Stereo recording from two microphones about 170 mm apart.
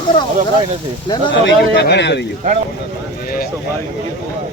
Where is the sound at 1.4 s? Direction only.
80° left.